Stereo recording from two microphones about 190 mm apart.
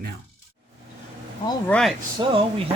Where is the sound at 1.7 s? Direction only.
5° left (ahead or behind).